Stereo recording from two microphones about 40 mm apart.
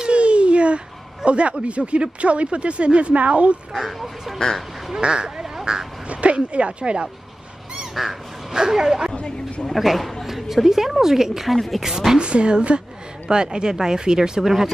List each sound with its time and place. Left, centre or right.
0.0 s speech: right
3.7 s speech: centre
5.0 s speech: right
5.4 s duck: centre
6.0 s speech: right
7.9 s speech: centre
9.1 s speech: left
9.8 s a woman's voice: centre
11.5 s speech: centre
12.2 s a woman's voice: right